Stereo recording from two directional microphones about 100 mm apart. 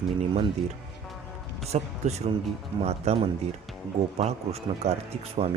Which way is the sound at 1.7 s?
90° right.